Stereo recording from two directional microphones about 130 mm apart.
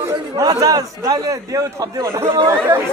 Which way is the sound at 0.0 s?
30° right (ahead or behind).